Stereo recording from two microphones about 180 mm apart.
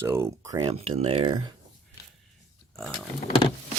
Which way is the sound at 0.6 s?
35° right (ahead or behind).